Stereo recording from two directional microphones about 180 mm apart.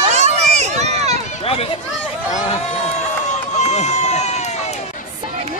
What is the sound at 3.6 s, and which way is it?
Run, 40° left (ahead or behind).